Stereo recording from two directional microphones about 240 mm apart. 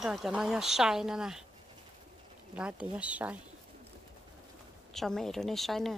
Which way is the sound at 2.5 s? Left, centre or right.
Centre.